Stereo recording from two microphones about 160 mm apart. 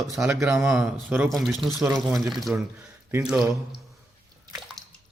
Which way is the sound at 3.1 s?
15° right (ahead or behind).